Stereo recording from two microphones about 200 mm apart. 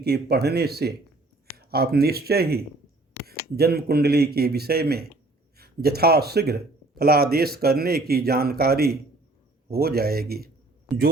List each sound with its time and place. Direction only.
0.0 s speech: 55° right (ahead or behind)